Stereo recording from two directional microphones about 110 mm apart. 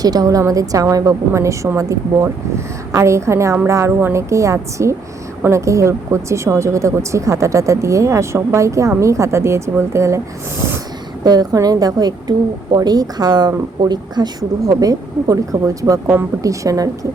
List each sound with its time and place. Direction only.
0.0 s speech: 35° right (ahead or behind)
11.2 s speech: 35° right (ahead or behind)